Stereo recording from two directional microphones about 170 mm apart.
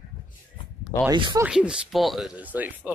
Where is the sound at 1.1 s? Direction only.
25° right (ahead or behind).